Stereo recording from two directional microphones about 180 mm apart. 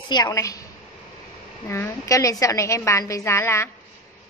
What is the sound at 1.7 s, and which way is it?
A woman's voice, 15° left (ahead or behind).